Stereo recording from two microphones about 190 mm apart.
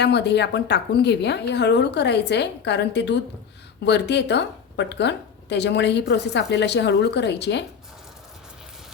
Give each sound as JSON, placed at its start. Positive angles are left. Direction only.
{"t": 0.0, "sound": "a woman's voice", "side_deg": 65}